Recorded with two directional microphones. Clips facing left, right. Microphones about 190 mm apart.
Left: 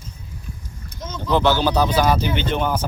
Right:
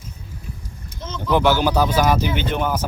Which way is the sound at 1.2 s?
15° right (ahead or behind).